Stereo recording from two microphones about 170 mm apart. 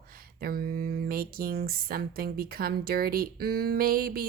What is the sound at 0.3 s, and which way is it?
Speech, 60° right (ahead or behind).